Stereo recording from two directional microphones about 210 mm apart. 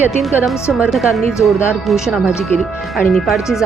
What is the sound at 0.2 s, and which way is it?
Speech, centre (ahead or behind).